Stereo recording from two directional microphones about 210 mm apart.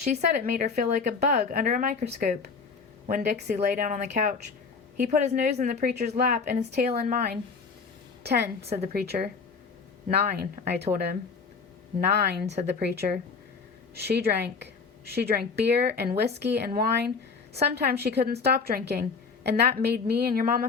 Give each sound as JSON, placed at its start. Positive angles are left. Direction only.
{"t": 0.0, "sound": "a woman's voice", "side_deg": -35}
{"t": 3.1, "sound": "a woman's voice", "side_deg": -50}
{"t": 8.6, "sound": "speech", "side_deg": -30}
{"t": 8.9, "sound": "a woman's voice", "side_deg": -50}